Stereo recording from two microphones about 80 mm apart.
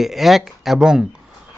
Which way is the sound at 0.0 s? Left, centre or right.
Centre.